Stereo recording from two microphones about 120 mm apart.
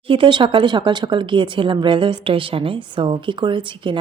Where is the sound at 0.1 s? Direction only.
40° right (ahead or behind).